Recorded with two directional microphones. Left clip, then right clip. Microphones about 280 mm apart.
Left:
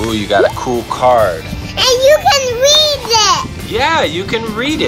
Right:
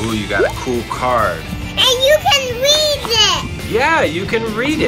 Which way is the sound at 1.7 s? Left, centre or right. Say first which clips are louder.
Left 3 dB; left.